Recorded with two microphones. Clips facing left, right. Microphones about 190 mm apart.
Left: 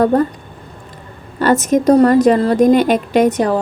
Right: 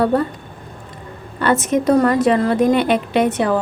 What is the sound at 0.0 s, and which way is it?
Speech, 45° left (ahead or behind).